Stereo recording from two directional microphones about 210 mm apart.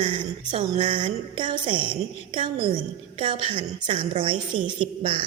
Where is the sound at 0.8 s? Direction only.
25° right (ahead or behind).